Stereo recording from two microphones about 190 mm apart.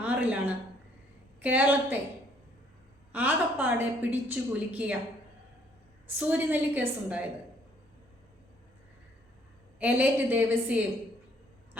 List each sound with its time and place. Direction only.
0.0 s a sound: 10° right (ahead or behind)
1.4 s a woman's voice: 10° right (ahead or behind)
3.1 s a woman's voice: 10° right (ahead or behind)
6.1 s a woman's voice: 10° right (ahead or behind)
9.7 s a woman's voice: 10° right (ahead or behind)